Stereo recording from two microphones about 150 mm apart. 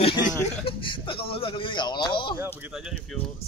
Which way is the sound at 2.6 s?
5° right (ahead or behind).